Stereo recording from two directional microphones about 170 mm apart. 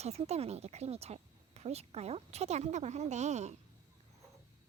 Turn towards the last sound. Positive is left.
turn(degrees=-40)  # may be behind; listen again after turning